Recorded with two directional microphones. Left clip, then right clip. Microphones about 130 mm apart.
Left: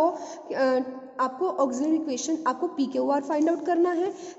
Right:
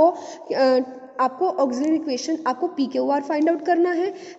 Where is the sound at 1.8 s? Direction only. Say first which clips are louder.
Right 4 dB; 20° right (ahead or behind).